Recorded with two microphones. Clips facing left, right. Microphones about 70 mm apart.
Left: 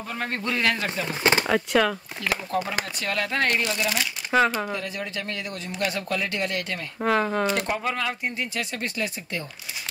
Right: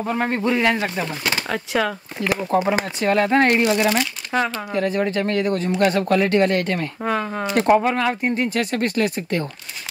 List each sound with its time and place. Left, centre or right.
0.0 s speech: right
0.3 s a man's voice: centre
1.5 s speech: centre
2.1 s speech: right
3.6 s speech: right
3.9 s speech: centre
4.7 s speech: right
7.0 s speech: centre
7.5 s speech: right